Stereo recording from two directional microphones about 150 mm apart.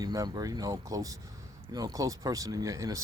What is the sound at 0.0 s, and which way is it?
Speech, 25° right (ahead or behind).